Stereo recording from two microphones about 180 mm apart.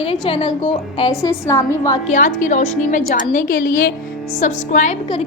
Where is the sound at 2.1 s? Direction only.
45° left (ahead or behind).